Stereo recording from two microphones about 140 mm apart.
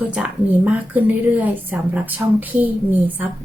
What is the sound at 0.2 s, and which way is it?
Speech, 10° right (ahead or behind).